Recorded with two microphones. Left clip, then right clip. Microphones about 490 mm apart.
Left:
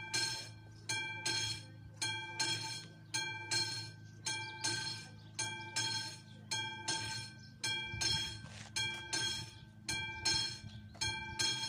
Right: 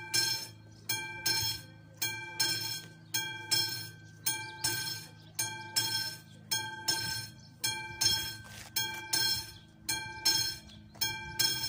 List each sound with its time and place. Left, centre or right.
0.1 s music: left